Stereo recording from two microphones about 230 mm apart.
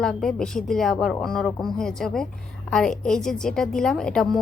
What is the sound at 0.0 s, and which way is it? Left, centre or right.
A woman's voice, centre.